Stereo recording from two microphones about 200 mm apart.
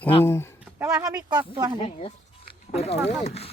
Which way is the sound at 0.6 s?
10° right (ahead or behind).